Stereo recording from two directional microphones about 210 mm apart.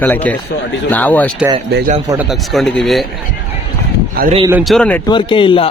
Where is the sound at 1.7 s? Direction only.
40° right (ahead or behind).